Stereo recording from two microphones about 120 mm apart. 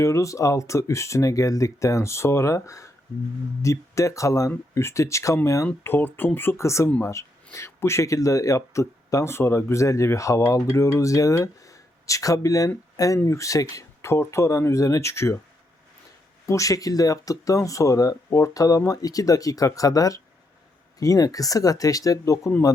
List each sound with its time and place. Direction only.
0.0 s speech: 25° left (ahead or behind)
16.5 s speech: 25° left (ahead or behind)